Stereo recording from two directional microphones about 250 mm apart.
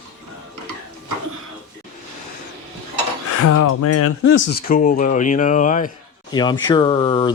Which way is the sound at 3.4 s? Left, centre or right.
Left.